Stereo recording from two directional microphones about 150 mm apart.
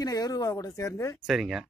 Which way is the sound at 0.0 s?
25° left (ahead or behind).